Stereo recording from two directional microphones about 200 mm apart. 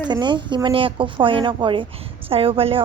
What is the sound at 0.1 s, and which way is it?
Speech, 20° right (ahead or behind).